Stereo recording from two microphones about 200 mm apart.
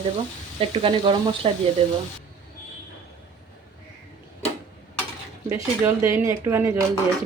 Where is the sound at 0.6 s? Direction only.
25° right (ahead or behind).